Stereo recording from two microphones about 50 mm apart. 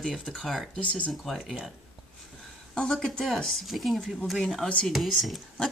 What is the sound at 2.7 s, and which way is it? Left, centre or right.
Speech, centre.